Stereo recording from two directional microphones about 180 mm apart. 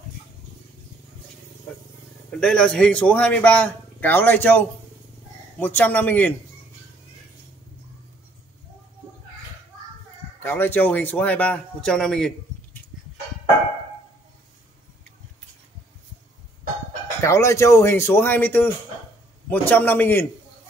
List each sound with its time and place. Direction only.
2.4 s a man's voice: 5° left (ahead or behind)
10.4 s a man's voice: 10° left (ahead or behind)
17.2 s a man's voice: 15° left (ahead or behind)